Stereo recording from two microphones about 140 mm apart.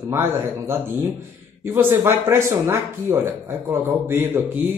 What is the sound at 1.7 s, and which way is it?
Speech, 20° right (ahead or behind).